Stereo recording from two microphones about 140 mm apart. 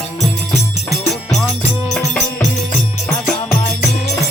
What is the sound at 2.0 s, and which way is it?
Music, 20° left (ahead or behind).